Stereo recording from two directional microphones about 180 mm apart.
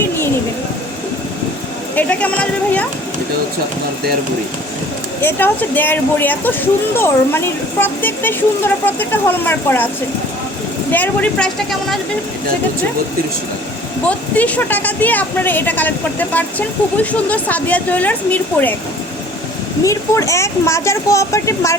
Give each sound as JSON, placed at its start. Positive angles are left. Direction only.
{"t": 2.0, "sound": "a sound", "side_deg": 10}
{"t": 5.2, "sound": "a woman's voice", "side_deg": 10}
{"t": 10.9, "sound": "speech", "side_deg": 10}
{"t": 14.1, "sound": "a woman's voice", "side_deg": 10}
{"t": 19.8, "sound": "a woman's voice", "side_deg": 20}